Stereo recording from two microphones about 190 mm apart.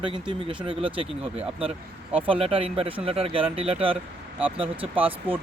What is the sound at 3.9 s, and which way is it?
Speech, 10° right (ahead or behind).